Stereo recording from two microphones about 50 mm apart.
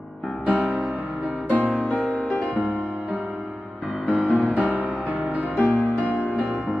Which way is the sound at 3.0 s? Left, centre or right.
Right.